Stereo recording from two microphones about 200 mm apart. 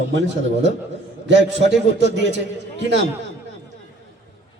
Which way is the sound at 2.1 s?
60° right (ahead or behind).